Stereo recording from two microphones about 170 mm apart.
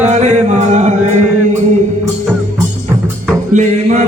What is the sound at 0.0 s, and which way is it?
Music, 45° right (ahead or behind).